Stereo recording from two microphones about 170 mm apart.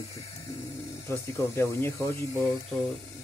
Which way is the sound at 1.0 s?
15° left (ahead or behind).